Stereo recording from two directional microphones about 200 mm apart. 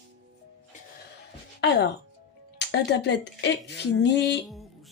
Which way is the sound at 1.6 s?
55° left (ahead or behind).